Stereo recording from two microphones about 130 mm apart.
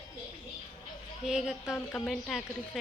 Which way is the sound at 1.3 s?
5° right (ahead or behind).